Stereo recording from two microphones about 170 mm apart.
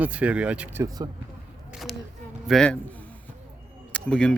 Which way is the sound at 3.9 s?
5° left (ahead or behind).